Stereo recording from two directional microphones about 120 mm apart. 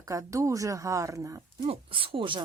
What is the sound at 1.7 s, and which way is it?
Speech, 50° right (ahead or behind).